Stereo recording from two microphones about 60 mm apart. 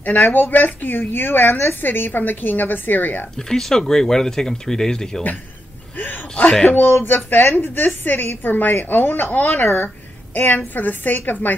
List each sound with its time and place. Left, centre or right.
0.0 s a woman's voice: left
3.3 s speech: centre
6.6 s a woman's voice: left